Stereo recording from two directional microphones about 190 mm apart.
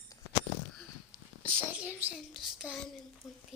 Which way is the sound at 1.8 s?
10° right (ahead or behind).